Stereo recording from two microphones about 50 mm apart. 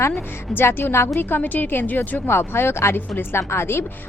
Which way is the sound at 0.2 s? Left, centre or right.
Left.